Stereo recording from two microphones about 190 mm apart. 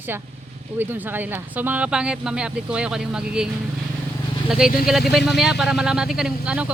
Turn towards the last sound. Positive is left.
turn(degrees=-5)  # may be behind; listen again after turning